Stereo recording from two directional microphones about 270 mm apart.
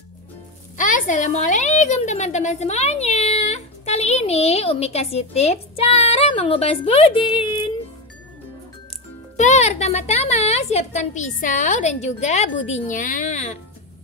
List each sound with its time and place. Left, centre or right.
0.7 s a woman's voice: left
9.4 s a woman's voice: left